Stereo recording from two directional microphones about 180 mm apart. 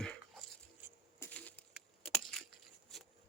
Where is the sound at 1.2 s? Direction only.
10° left (ahead or behind).